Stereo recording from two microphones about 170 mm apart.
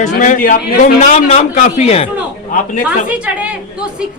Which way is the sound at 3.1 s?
10° right (ahead or behind).